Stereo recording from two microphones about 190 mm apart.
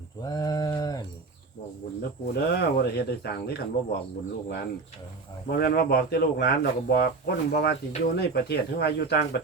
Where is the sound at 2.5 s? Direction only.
55° left (ahead or behind).